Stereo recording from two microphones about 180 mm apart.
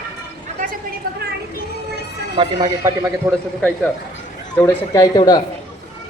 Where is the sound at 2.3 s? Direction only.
20° right (ahead or behind).